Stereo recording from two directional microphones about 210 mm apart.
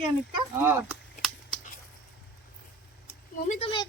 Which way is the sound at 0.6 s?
10° right (ahead or behind).